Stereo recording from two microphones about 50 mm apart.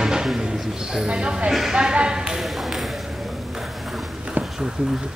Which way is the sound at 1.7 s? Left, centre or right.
Centre.